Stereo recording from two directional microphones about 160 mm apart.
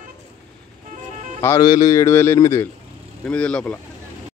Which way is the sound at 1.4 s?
20° left (ahead or behind).